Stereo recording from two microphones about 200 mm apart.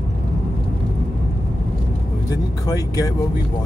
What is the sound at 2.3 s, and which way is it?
Speech, 20° left (ahead or behind).